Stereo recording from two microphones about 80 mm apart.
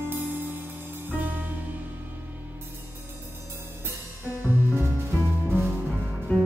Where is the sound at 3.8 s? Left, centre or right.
Right.